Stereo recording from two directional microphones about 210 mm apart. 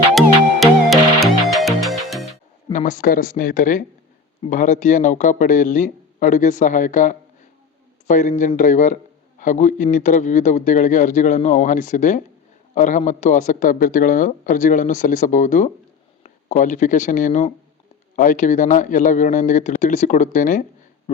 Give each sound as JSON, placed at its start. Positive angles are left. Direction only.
{"t": 0.1, "sound": "music", "side_deg": 0}
{"t": 2.7, "sound": "a man's voice", "side_deg": 40}